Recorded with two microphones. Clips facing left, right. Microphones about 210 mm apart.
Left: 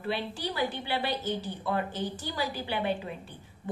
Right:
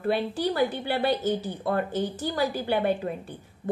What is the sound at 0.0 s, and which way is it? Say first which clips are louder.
A woman's voice: right 7 dB; 45° right (ahead or behind).